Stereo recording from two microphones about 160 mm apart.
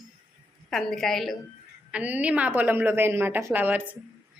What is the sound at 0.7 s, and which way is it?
Speech, centre (ahead or behind).